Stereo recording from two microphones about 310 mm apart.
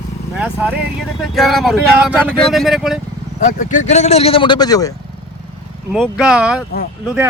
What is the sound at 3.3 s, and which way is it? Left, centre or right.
Speech, left.